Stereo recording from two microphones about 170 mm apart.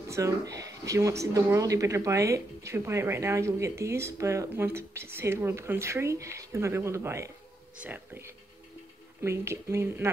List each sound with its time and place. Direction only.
0.1 s speech: 20° right (ahead or behind)